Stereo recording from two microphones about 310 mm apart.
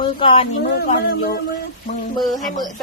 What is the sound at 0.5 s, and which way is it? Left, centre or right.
Speech, left.